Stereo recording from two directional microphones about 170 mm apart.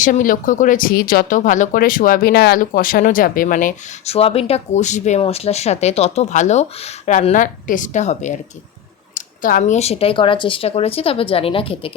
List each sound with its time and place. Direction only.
0.0 s speech: 50° left (ahead or behind)
4.1 s speech: 35° left (ahead or behind)